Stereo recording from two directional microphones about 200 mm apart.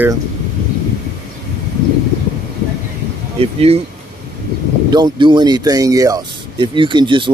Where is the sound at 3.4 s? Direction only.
30° right (ahead or behind).